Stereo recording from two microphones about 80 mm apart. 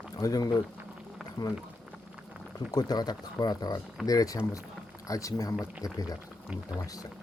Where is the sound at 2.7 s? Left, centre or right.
Left.